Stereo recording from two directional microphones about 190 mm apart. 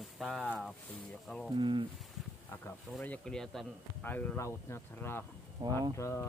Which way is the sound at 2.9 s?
5° left (ahead or behind).